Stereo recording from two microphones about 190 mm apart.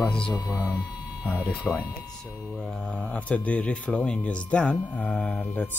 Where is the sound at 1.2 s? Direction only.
5° right (ahead or behind).